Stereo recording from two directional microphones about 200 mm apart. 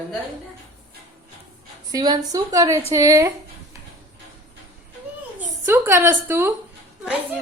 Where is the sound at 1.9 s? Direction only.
20° right (ahead or behind).